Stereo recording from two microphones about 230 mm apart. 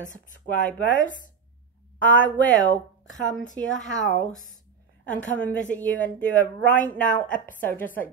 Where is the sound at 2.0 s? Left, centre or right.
Centre.